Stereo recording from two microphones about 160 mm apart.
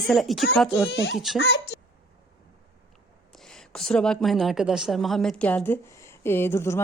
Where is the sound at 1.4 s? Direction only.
90° left.